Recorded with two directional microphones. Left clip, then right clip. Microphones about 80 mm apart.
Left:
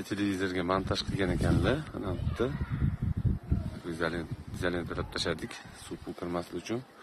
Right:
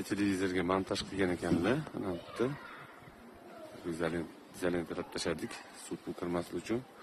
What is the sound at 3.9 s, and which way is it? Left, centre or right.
Speech, centre.